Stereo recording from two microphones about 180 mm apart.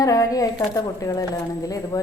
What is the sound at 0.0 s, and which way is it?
Speech, 20° left (ahead or behind).